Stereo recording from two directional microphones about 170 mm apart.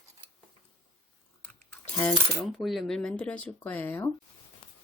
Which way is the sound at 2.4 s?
Centre (ahead or behind).